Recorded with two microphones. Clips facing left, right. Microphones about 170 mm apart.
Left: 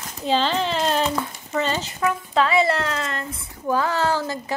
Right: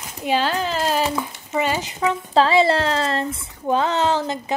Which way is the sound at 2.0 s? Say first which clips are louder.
Right 3 dB; 30° right (ahead or behind).